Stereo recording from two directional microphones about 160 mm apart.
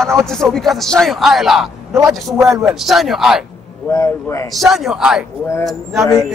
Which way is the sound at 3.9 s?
20° left (ahead or behind).